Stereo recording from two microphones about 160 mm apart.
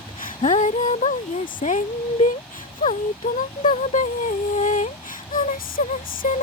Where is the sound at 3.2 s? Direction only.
55° left (ahead or behind).